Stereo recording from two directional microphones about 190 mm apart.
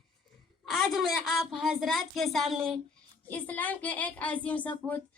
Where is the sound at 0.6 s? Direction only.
Centre (ahead or behind).